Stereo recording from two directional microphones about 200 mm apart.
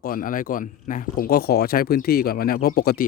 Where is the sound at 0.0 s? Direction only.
45° left (ahead or behind).